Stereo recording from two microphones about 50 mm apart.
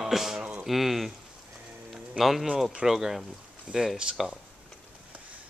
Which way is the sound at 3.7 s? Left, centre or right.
Right.